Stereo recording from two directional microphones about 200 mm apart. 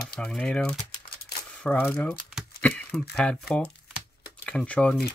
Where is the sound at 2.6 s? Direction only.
5° left (ahead or behind).